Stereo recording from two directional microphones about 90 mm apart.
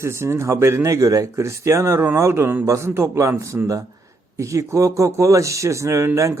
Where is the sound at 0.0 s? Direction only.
30° right (ahead or behind).